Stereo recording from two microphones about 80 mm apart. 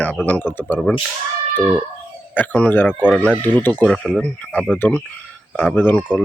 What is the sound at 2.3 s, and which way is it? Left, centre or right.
Speech, centre.